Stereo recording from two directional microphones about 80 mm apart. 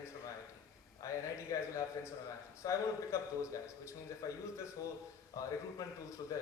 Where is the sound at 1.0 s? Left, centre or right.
Left.